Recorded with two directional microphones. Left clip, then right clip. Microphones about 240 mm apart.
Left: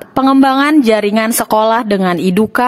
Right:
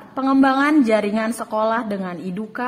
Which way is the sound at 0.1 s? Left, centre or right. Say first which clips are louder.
Left 7 dB; left.